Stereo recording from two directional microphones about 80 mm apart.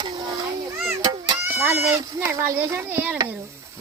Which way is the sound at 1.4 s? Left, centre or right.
Right.